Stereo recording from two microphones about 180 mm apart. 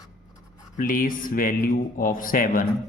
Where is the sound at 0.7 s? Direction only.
50° left (ahead or behind).